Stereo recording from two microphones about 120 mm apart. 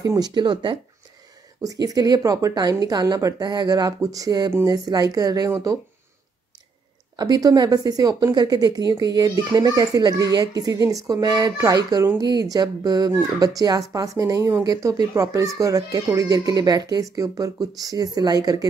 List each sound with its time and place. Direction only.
0.0 s speech: 30° right (ahead or behind)
1.6 s speech: 30° right (ahead or behind)
7.2 s speech: 30° right (ahead or behind)